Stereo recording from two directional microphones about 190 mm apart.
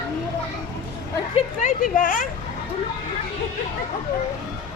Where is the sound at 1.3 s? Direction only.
40° left (ahead or behind).